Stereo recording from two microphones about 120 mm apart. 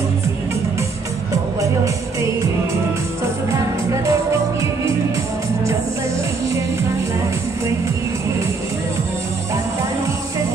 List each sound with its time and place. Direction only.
3.5 s music: 25° right (ahead or behind)